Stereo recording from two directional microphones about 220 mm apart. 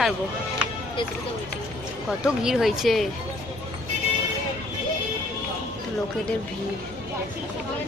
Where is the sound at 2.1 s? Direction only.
5° right (ahead or behind).